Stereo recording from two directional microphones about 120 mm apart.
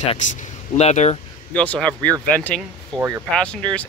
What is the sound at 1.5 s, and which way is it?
Speech, 10° left (ahead or behind).